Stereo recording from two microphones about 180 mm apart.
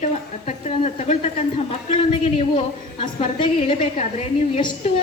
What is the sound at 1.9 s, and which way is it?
A woman's voice, 35° left (ahead or behind).